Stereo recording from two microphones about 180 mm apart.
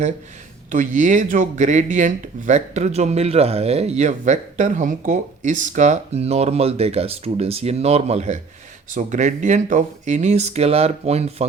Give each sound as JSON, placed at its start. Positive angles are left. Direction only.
{"t": 0.7, "sound": "speech", "side_deg": -45}